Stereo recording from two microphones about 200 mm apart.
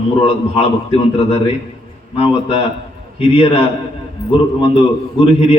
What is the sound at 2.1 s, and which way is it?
Speech, 25° left (ahead or behind).